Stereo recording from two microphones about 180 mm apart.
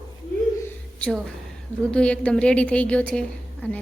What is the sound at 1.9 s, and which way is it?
A woman's voice, 5° left (ahead or behind).